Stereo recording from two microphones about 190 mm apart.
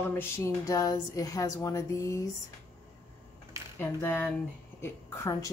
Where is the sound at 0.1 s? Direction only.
15° left (ahead or behind).